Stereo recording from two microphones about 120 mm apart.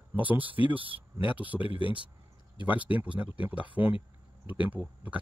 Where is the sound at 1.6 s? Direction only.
45° left (ahead or behind).